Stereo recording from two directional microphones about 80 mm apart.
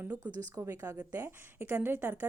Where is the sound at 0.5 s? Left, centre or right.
Right.